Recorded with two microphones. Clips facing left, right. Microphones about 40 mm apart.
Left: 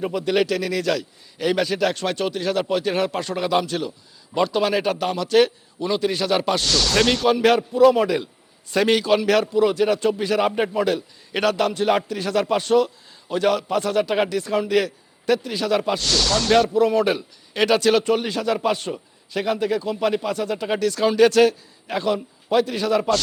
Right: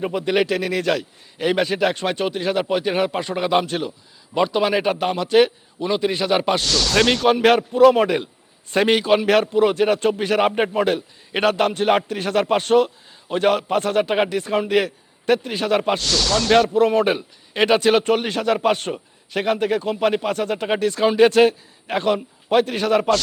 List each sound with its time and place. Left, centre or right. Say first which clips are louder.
0.0 s a man's voice: right 1 dB; right
4.4 s a man's voice: right 1 dB; centre
6.6 s speech: right 1 dB; centre
7.3 s a man's voice: right 2 dB; right
16.0 s speech: right 1 dB; centre
16.7 s a man's voice: right 1 dB; right
18.0 s a man's voice: right 2 dB; right
21.8 s a man's voice: right 2 dB; right